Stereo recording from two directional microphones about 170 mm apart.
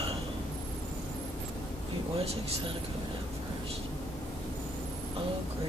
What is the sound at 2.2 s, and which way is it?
Speech, 35° right (ahead or behind).